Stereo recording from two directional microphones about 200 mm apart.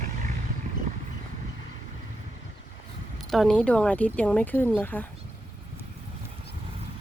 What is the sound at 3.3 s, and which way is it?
Speech, centre (ahead or behind).